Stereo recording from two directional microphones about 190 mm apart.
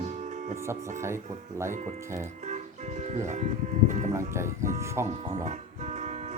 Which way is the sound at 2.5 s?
35° right (ahead or behind).